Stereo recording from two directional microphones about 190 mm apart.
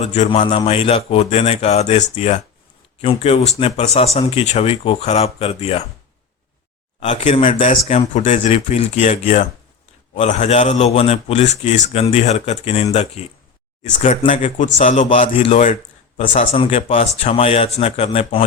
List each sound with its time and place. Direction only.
0.0 s a man's voice: 35° left (ahead or behind)
7.0 s a man's voice: 35° left (ahead or behind)
15.6 s a sound: 40° left (ahead or behind)
16.4 s a man's voice: 30° left (ahead or behind)